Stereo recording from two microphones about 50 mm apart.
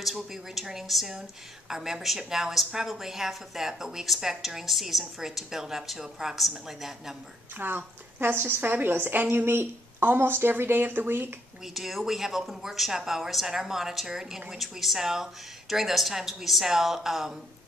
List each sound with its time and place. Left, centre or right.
0.0 s a woman's voice: centre
7.5 s speech: right
11.6 s a woman's voice: centre